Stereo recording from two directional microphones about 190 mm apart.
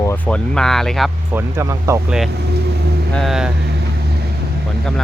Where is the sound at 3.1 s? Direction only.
Centre (ahead or behind).